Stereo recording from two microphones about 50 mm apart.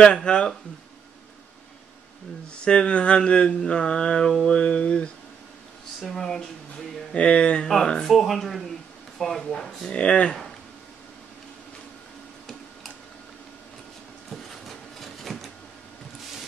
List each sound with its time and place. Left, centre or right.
0.0 s speech: centre
2.6 s speech: centre
7.2 s speech: left
7.6 s speech: centre
9.9 s speech: left
14.3 s a sound: centre